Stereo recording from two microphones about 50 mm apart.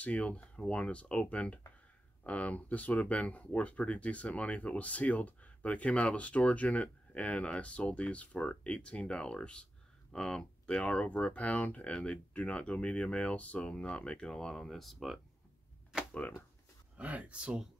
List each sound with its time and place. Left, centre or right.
0.0 s speech: left; by 10.8 s centre
10.8 s speech: left; by 15.1 s centre
16.9 s speech: right